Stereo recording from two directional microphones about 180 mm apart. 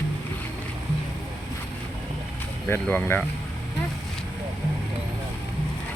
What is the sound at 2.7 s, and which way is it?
Speech, 10° left (ahead or behind).